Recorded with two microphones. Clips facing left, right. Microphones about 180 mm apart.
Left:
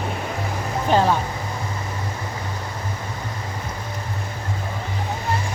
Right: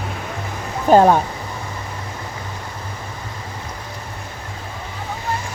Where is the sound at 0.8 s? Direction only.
50° right (ahead or behind).